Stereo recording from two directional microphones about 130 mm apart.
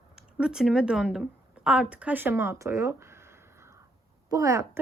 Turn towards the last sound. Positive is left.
turn(degrees=-25)  # may be behind; listen again after turning